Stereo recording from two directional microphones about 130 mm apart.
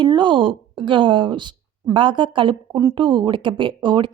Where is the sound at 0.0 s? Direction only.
35° right (ahead or behind).